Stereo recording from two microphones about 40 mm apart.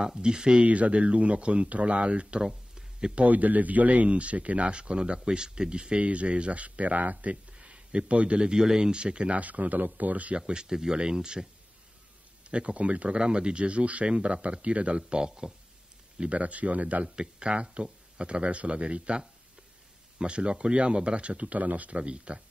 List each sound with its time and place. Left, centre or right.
0.0 s speech: centre
0.7 s speech: right
2.4 s a sound: centre
3.2 s speech: right
7.5 s a sound: right
8.4 s speech: centre
9.4 s speech: right
10.3 s speech: right
12.4 s speech: right
16.2 s speech: right
17.1 s speech: right
22.0 s speech: right